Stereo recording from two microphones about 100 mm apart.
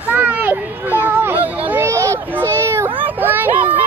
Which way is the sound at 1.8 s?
30° right (ahead or behind).